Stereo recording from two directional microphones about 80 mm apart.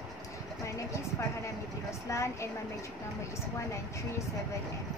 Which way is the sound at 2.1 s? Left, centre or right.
Left.